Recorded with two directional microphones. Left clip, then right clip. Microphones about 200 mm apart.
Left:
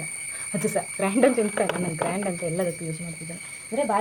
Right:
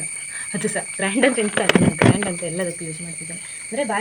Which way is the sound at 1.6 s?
55° right (ahead or behind).